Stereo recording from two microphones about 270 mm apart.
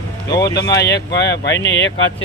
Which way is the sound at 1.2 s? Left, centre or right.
Left.